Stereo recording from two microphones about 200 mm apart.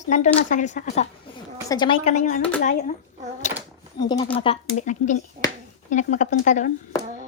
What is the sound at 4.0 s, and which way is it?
A woman's voice, 20° left (ahead or behind).